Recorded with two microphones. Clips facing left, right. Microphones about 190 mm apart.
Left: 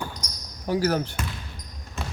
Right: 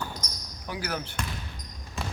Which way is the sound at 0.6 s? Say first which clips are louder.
Left 10 dB; 40° left (ahead or behind).